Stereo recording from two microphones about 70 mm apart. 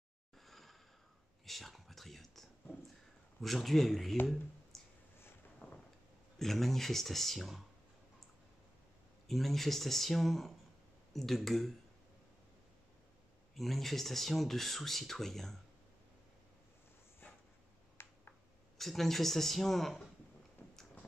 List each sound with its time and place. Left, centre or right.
0.5 s a sound: centre
1.4 s whispering: centre
3.3 s speech: centre
4.7 s clicking: centre
5.6 s a sound: left
6.3 s speech: centre
9.3 s speech: centre
13.6 s speech: centre
17.2 s dog: left
18.0 s a sound: left
18.8 s speech: centre